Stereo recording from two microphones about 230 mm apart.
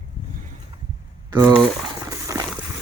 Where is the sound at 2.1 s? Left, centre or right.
Centre.